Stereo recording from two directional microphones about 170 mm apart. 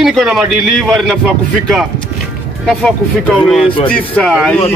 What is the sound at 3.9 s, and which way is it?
Speech, 5° left (ahead or behind).